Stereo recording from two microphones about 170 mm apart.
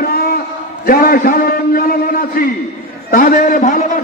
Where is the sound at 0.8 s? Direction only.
60° left (ahead or behind).